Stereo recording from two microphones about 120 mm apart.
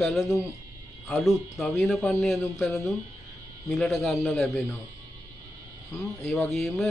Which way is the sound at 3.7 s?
Centre (ahead or behind).